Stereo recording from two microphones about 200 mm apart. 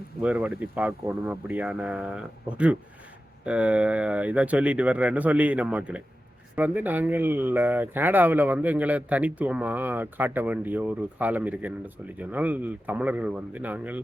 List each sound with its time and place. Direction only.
0.2 s speech: 5° right (ahead or behind)